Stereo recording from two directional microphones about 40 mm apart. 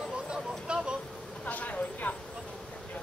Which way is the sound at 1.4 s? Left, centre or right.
Left.